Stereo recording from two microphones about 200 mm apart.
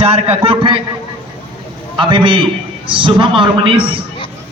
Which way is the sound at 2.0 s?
25° right (ahead or behind).